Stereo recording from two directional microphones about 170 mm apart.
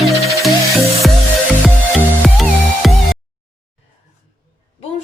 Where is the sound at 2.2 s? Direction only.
Centre (ahead or behind).